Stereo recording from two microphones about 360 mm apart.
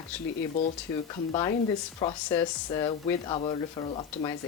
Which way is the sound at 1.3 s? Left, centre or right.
Centre.